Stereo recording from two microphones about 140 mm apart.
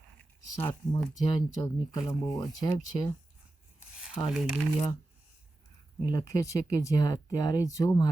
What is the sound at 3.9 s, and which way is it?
Speech, 5° right (ahead or behind).